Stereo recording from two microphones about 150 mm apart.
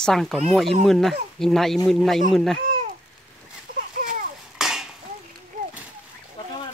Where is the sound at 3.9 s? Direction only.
65° right (ahead or behind).